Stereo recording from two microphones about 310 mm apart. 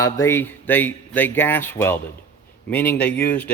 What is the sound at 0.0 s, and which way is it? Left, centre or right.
Speech, centre.